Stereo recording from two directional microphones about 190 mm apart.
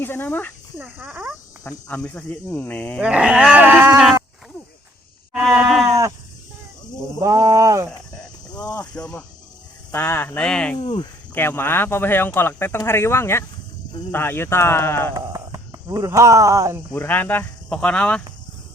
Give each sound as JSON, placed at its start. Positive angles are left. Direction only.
{"t": 0.0, "sound": "speech", "side_deg": 10}
{"t": 0.8, "sound": "a sound", "side_deg": -10}
{"t": 1.9, "sound": "speech", "side_deg": 5}
{"t": 3.0, "sound": "a sound", "side_deg": -5}
{"t": 5.3, "sound": "sheep", "side_deg": 0}
{"t": 7.2, "sound": "speech", "side_deg": -15}
{"t": 8.7, "sound": "speech", "side_deg": 5}
{"t": 10.8, "sound": "speech", "side_deg": 25}
{"t": 11.3, "sound": "speech", "side_deg": 10}
{"t": 15.1, "sound": "speech", "side_deg": -20}
{"t": 16.9, "sound": "speech", "side_deg": 10}